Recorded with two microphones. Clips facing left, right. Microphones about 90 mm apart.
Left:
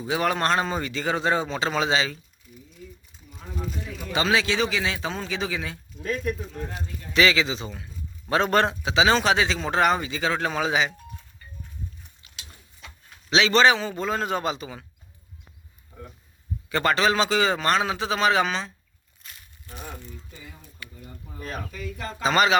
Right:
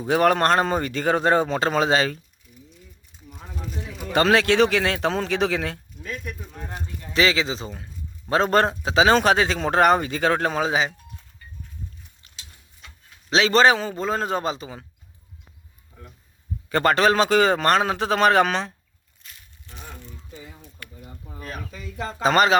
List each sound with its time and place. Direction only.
0.0 s speech: 50° right (ahead or behind)
3.2 s speech: centre (ahead or behind)
4.1 s a man's voice: 60° right (ahead or behind)
6.0 s speech: 40° left (ahead or behind)
6.7 s a man's voice: 35° right (ahead or behind)
13.3 s a man's voice: 40° right (ahead or behind)
16.6 s speech: 45° right (ahead or behind)
19.6 s speech: 10° left (ahead or behind)
20.1 s speech: 25° right (ahead or behind)
22.2 s speech: 45° right (ahead or behind)